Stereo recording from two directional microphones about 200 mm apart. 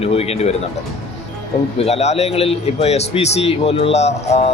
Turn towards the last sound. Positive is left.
turn(degrees=30)  # may be behind; listen again after turning